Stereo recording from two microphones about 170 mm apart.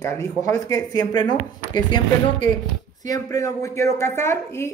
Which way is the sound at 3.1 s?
20° left (ahead or behind).